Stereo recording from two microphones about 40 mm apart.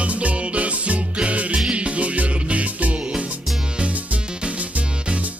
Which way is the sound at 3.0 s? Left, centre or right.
Right.